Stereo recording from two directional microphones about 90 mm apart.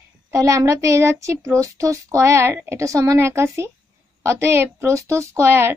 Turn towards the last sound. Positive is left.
turn(degrees=-30)  # may be behind; listen again after turning